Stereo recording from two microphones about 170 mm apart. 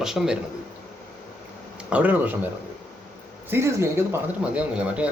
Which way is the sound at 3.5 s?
15° right (ahead or behind).